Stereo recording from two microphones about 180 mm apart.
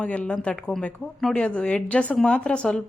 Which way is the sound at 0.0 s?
5° left (ahead or behind).